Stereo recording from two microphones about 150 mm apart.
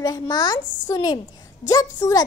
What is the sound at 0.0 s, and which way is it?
A child's voice, 25° left (ahead or behind).